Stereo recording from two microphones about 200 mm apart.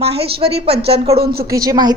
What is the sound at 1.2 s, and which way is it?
Speech, 50° right (ahead or behind).